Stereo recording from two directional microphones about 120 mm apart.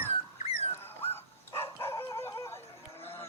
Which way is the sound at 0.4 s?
55° left (ahead or behind).